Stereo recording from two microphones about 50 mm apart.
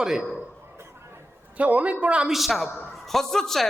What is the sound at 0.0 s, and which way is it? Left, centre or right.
Speech, centre.